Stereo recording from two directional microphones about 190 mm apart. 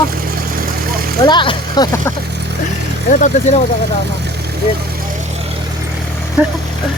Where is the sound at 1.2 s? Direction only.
25° left (ahead or behind).